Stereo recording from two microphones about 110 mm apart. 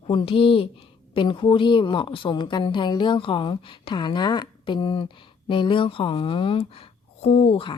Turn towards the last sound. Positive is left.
turn(degrees=60)  # may be behind; listen again after turning